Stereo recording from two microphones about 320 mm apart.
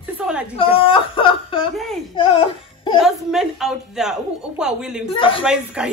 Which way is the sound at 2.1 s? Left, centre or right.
Centre.